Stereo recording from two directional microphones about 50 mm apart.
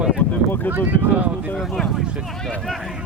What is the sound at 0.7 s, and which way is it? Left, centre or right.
Speech, right.